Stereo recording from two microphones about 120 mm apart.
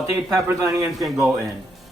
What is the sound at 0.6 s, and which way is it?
Speech, 25° right (ahead or behind).